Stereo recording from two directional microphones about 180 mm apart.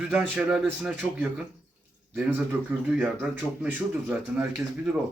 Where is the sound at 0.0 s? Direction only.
5° right (ahead or behind).